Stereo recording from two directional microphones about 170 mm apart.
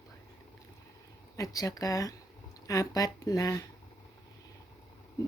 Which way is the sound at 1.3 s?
20° left (ahead or behind).